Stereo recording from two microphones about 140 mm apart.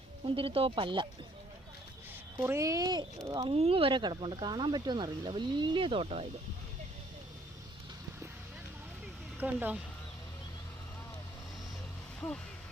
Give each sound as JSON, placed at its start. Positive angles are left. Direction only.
{"t": 0.3, "sound": "speech", "side_deg": -40}
{"t": 2.4, "sound": "a child's voice", "side_deg": -20}
{"t": 3.5, "sound": "speech", "side_deg": -45}
{"t": 9.4, "sound": "speech", "side_deg": -10}